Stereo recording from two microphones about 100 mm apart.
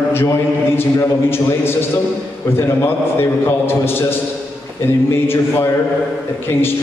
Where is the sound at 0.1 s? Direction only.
25° left (ahead or behind).